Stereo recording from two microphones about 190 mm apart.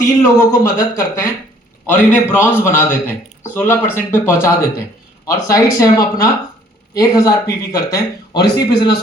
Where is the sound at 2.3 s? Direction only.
10° left (ahead or behind).